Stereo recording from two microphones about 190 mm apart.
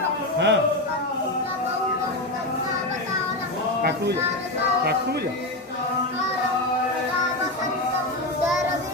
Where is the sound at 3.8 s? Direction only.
60° right (ahead or behind).